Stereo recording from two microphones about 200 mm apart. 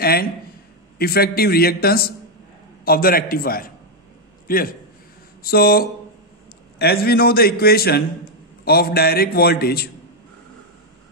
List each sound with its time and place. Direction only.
0.0 s a man's voice: 50° left (ahead or behind)